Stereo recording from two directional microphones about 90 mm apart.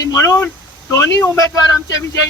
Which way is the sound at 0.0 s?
40° left (ahead or behind).